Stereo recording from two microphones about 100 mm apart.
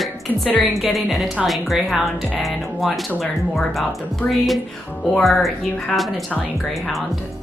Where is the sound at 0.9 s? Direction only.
Centre (ahead or behind).